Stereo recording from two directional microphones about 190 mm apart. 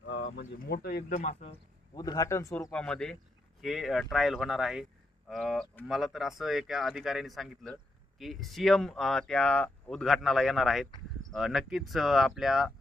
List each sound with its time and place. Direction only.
0.0 s a sound: 75° left (ahead or behind)
0.7 s speech: 55° left (ahead or behind)
1.1 s speech: 35° left (ahead or behind)
2.0 s a man's voice: 20° left (ahead or behind)
2.7 s speech: 5° left (ahead or behind)